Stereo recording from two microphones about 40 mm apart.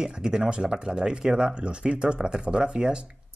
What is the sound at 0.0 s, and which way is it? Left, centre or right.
Speech, centre.